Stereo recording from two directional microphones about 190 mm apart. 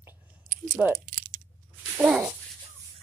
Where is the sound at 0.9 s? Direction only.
45° right (ahead or behind).